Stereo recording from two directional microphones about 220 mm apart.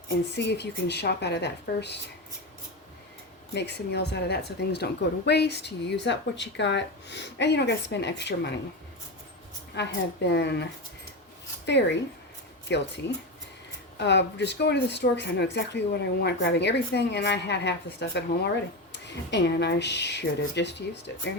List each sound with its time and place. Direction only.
0.3 s a woman's voice: 50° left (ahead or behind)
3.5 s a woman's voice: 50° left (ahead or behind)
9.7 s a woman's voice: 50° left (ahead or behind)
14.0 s a woman's voice: 50° left (ahead or behind)